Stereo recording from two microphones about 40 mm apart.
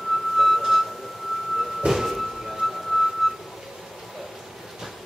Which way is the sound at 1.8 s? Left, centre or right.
Right.